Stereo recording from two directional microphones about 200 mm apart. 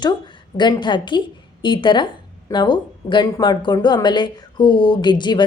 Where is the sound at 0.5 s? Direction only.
20° left (ahead or behind).